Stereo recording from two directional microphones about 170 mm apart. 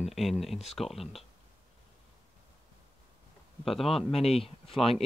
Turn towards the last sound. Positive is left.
turn(degrees=35)  # may be behind; listen again after turning